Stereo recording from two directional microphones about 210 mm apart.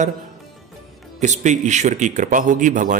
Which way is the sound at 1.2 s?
35° right (ahead or behind).